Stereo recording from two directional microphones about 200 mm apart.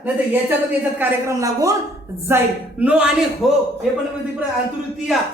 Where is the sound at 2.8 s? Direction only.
5° right (ahead or behind).